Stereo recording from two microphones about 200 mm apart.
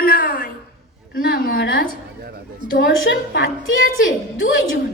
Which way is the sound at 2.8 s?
65° left (ahead or behind).